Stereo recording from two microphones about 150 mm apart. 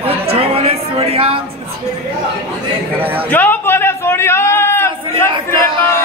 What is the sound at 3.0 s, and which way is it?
Speech, 10° right (ahead or behind).